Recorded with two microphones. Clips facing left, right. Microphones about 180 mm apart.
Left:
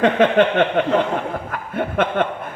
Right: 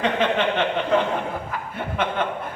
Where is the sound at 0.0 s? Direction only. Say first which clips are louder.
Left 7 dB; 55° left (ahead or behind).